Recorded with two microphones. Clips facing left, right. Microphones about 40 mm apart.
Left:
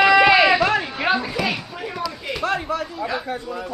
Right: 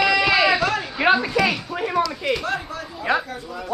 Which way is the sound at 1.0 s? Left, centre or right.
Centre.